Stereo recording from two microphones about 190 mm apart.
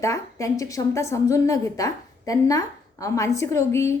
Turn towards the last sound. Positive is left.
turn(degrees=15)  # may be behind; listen again after turning